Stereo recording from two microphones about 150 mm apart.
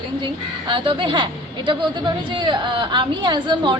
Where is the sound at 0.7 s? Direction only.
35° right (ahead or behind).